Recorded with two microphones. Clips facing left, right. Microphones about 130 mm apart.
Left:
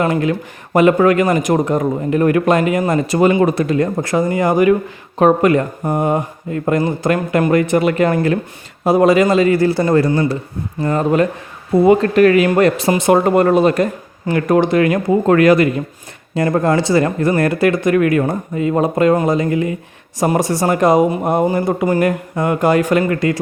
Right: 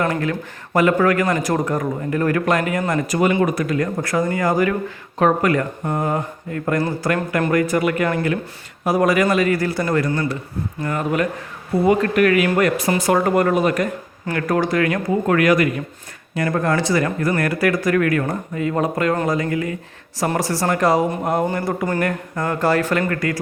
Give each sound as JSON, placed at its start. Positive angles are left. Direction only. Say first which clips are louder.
{"t": 0.0, "sound": "speech", "louder": "left 5 dB", "side_deg": 20}